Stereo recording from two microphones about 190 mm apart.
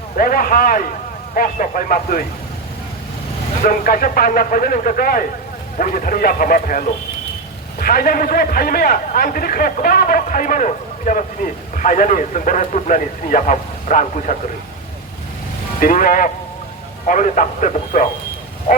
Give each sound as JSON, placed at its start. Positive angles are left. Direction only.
{"t": 0.2, "sound": "a man's voice", "side_deg": 45}
{"t": 3.7, "sound": "a man's voice", "side_deg": 45}
{"t": 15.8, "sound": "a man's voice", "side_deg": 45}